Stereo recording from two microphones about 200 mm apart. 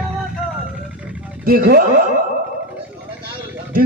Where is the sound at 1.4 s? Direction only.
45° right (ahead or behind).